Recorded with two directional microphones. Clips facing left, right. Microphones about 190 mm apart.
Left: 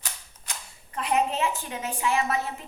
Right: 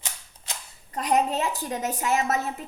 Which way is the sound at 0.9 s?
40° right (ahead or behind).